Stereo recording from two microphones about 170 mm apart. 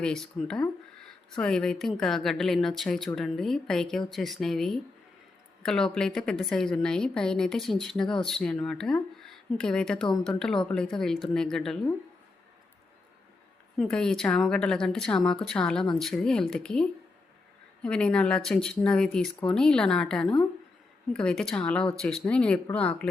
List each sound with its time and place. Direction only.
0.0 s a sound: 5° left (ahead or behind)
1.4 s speech: 5° left (ahead or behind)
13.7 s a woman's voice: 5° left (ahead or behind)